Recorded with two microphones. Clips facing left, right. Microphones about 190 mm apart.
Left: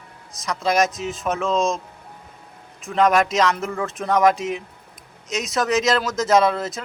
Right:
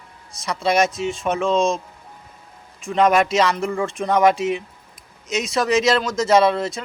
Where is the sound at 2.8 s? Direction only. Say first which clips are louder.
Right 1 dB; centre (ahead or behind).